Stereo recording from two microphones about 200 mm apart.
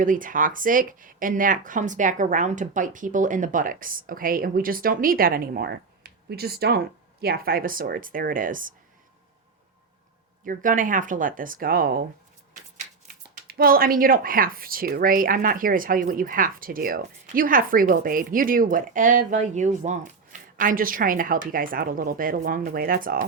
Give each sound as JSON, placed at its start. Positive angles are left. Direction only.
{"t": 0.0, "sound": "speech", "side_deg": -40}
{"t": 10.4, "sound": "speech", "side_deg": -45}
{"t": 13.3, "sound": "speech", "side_deg": -50}